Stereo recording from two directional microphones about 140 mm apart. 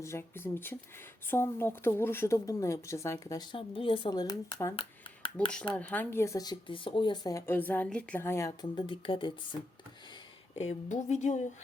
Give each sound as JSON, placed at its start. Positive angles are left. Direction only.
{"t": 0.0, "sound": "speech", "side_deg": 20}
{"t": 4.8, "sound": "a sound", "side_deg": 35}
{"t": 5.7, "sound": "speech", "side_deg": 10}
{"t": 8.7, "sound": "speech", "side_deg": 40}
{"t": 10.5, "sound": "speech", "side_deg": 55}